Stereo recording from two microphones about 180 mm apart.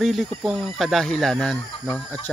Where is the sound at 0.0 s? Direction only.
Centre (ahead or behind).